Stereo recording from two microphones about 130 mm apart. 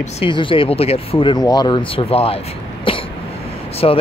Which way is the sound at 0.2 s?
40° left (ahead or behind).